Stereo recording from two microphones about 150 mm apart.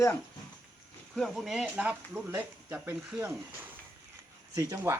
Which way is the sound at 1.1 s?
Centre (ahead or behind).